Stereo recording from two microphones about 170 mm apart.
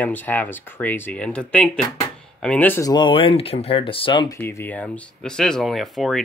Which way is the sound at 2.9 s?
25° left (ahead or behind).